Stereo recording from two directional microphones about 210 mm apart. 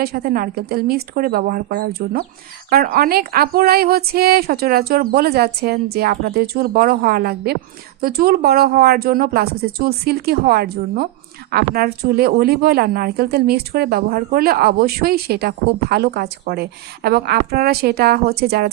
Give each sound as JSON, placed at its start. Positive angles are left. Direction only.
{"t": 0.0, "sound": "speech", "side_deg": -45}